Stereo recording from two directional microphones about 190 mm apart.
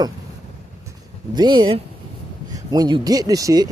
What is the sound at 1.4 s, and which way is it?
Speech, 25° right (ahead or behind).